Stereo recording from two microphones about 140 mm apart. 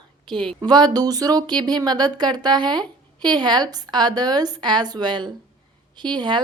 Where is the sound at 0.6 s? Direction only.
30° right (ahead or behind).